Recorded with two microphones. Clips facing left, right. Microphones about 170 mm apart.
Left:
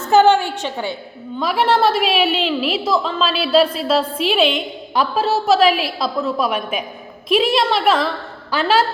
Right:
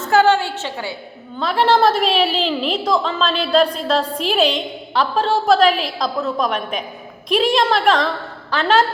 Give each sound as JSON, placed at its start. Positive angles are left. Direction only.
{"t": 0.1, "sound": "a woman's voice", "side_deg": 20}
{"t": 4.4, "sound": "a woman's voice", "side_deg": -35}
{"t": 4.9, "sound": "a woman's voice", "side_deg": 10}